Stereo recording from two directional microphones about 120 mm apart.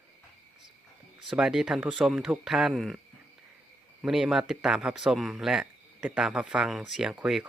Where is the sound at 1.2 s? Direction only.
5° right (ahead or behind).